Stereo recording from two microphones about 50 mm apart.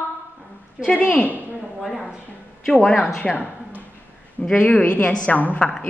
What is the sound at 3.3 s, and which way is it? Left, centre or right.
Speech, centre.